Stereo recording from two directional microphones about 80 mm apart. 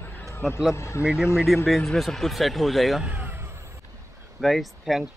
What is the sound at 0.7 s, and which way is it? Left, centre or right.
Speech, left.